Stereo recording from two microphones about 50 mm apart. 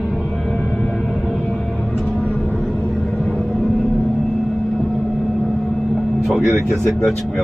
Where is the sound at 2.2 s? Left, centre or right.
Left.